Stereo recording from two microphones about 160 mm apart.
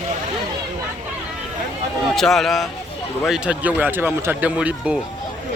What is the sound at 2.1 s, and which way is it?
Speech, centre (ahead or behind).